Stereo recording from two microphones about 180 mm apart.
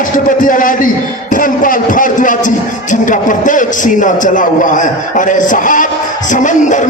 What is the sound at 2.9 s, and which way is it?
A man's voice, 45° left (ahead or behind).